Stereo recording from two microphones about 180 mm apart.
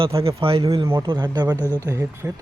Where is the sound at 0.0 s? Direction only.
30° right (ahead or behind).